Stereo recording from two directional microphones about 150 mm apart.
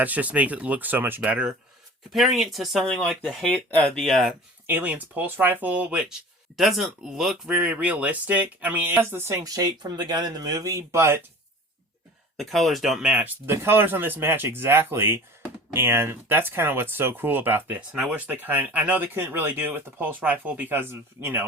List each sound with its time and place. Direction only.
0.0 s speech: 10° right (ahead or behind)
4.6 s speech: 10° right (ahead or behind)
12.4 s speech: centre (ahead or behind)